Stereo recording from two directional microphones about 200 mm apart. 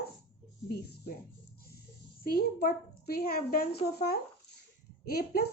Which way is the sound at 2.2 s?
50° left (ahead or behind).